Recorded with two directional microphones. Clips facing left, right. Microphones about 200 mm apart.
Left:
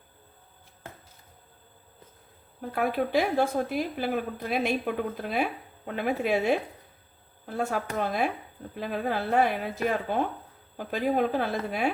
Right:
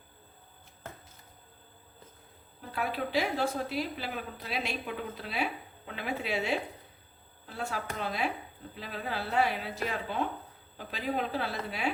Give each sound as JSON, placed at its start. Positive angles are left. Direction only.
{"t": 2.7, "sound": "a woman's voice", "side_deg": 50}